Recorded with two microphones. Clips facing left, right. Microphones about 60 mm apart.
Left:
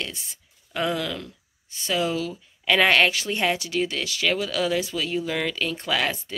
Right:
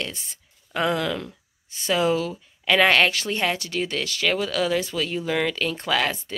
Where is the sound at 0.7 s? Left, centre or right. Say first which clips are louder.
Right 3 dB; centre.